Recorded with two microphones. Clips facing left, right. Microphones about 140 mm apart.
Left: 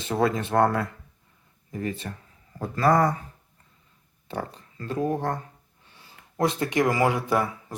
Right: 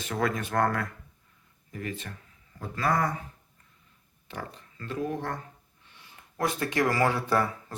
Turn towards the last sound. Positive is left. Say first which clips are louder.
# left 2 dB
turn(degrees=15)  # may be behind; listen again after turning